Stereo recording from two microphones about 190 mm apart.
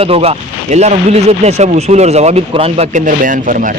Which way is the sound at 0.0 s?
30° right (ahead or behind).